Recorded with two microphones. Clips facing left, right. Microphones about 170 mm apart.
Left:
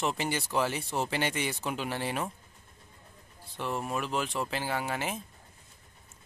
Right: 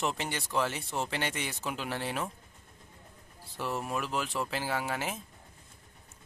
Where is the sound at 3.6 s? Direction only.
Centre (ahead or behind).